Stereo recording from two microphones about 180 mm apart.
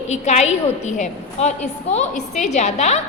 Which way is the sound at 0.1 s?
40° left (ahead or behind).